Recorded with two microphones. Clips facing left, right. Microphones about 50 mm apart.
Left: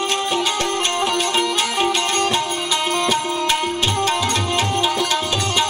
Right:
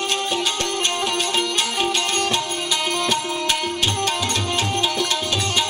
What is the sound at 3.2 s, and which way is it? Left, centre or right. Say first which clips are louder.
Tabla: left 3 dB; centre.